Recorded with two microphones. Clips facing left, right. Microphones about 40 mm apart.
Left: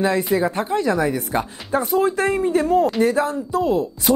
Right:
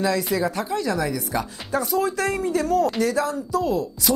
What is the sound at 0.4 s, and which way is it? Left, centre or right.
Speech, left.